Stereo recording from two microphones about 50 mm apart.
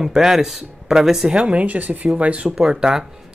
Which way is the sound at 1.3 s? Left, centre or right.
Right.